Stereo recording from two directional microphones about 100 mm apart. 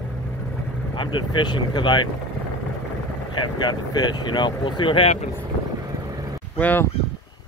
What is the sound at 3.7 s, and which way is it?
Speech, 45° left (ahead or behind).